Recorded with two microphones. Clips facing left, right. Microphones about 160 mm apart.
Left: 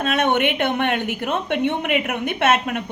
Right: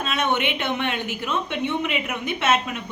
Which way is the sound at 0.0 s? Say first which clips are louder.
Left 5 dB; 55° left (ahead or behind).